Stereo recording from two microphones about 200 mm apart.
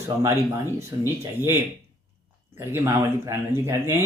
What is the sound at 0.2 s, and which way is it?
Speech, 15° right (ahead or behind).